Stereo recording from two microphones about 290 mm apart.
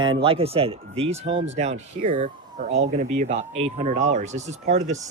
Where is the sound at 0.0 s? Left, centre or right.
Centre.